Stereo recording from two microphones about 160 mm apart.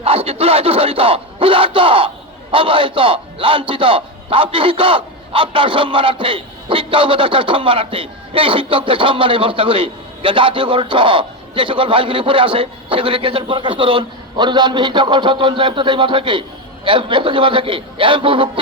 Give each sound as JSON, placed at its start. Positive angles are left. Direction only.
{"t": 0.0, "sound": "a man's voice", "side_deg": -35}